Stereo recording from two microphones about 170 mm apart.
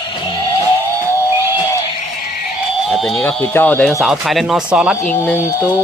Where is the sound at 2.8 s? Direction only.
Centre (ahead or behind).